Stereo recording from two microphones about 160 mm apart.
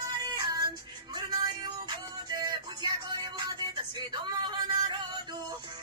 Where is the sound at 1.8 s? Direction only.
25° right (ahead or behind).